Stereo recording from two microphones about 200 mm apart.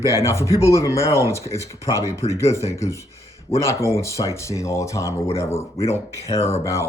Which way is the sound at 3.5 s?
30° left (ahead or behind).